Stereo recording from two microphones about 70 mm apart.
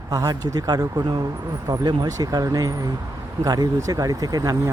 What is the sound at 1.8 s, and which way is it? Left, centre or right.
Speech, right.